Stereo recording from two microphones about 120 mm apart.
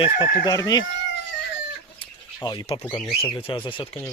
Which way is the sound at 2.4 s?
35° left (ahead or behind).